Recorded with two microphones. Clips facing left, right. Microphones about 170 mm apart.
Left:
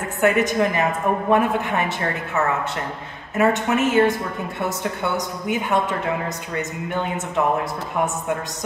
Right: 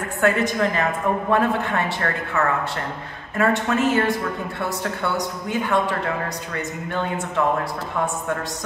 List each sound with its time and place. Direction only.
0.2 s a man's voice: 20° left (ahead or behind)